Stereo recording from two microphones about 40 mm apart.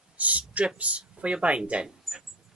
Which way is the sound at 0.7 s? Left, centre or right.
Right.